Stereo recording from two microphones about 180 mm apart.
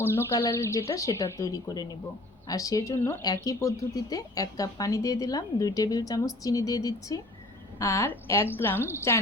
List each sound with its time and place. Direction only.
0.0 s a woman's voice: 15° left (ahead or behind)